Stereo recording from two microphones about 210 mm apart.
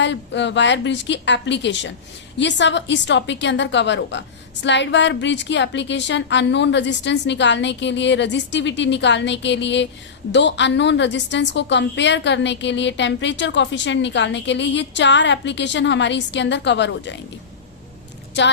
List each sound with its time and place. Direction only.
0.0 s a woman's voice: 60° left (ahead or behind)